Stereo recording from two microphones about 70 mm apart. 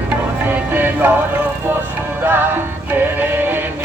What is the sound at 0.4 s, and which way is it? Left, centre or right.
Music, right.